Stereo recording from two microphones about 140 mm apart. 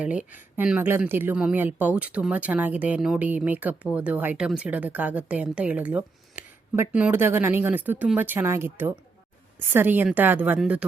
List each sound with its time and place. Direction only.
0.0 s speech: 10° right (ahead or behind)